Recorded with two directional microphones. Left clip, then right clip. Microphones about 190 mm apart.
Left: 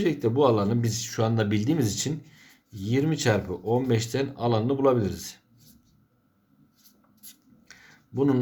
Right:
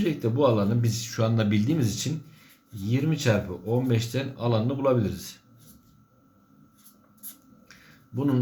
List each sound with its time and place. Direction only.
0.0 s speech: 40° left (ahead or behind)
8.1 s speech: 40° left (ahead or behind)